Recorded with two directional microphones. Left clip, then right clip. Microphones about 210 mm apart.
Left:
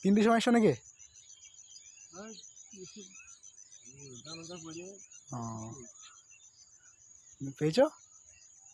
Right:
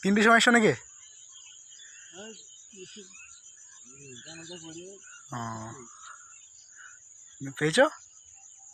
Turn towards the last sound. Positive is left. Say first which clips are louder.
# right 4 dB
turn(degrees=0)  # may be behind; listen again after turning